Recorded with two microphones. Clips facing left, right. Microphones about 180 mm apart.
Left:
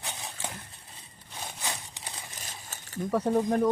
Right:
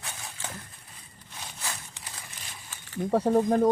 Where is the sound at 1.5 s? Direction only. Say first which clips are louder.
Even; 20° left (ahead or behind).